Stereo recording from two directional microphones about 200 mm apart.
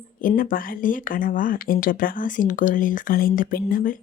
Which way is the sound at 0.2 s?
45° left (ahead or behind).